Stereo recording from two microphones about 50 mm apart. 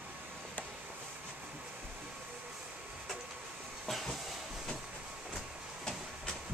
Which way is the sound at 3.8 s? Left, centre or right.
Centre.